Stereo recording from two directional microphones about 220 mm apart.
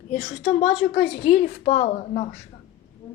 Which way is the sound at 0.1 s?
35° left (ahead or behind).